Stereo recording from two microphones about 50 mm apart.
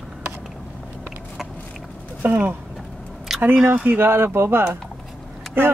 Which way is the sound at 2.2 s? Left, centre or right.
Right.